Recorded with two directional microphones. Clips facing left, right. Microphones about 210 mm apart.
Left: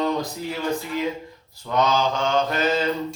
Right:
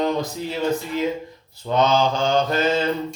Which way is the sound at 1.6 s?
25° right (ahead or behind).